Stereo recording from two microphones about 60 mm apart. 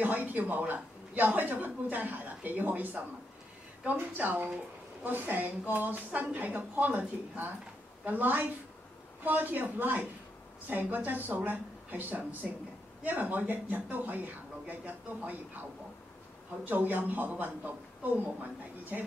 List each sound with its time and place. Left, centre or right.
0.0 s speech: right
16.6 s speech: right